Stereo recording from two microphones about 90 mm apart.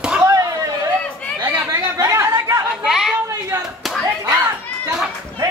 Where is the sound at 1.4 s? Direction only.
30° right (ahead or behind).